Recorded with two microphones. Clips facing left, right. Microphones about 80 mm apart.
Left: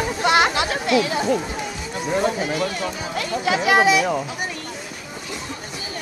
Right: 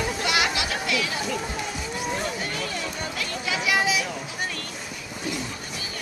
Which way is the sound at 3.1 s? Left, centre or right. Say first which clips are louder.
Left 10 dB; left.